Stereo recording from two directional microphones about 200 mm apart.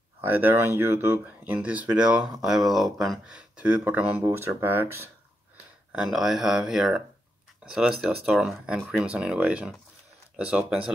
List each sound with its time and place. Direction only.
0.3 s speech: 10° right (ahead or behind)